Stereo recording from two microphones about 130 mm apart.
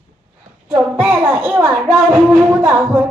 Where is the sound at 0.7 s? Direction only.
15° right (ahead or behind).